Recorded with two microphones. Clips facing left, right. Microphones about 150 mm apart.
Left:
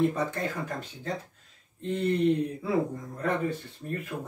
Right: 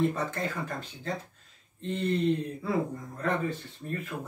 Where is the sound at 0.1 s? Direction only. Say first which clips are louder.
Left 2 dB; 15° left (ahead or behind).